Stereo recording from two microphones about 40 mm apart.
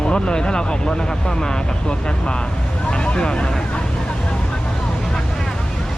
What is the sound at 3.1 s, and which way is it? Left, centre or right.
Speech, left.